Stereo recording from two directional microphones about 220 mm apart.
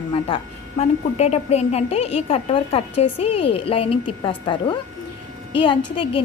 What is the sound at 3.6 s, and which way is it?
A woman's voice, 25° left (ahead or behind).